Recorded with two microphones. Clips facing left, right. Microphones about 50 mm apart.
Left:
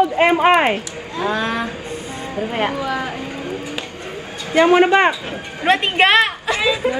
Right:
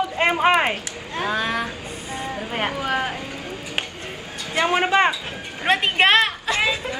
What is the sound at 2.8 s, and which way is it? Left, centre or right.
Vehicle, right.